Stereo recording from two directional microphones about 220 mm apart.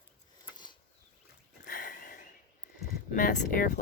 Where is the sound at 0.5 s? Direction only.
20° left (ahead or behind).